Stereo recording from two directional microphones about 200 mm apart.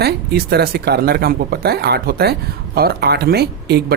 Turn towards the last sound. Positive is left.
turn(degrees=-55)  # may be behind; listen again after turning